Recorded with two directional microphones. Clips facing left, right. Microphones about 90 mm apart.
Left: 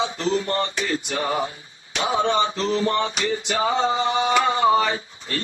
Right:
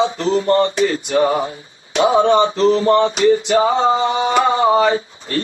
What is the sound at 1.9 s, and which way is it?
Male singing, 35° right (ahead or behind).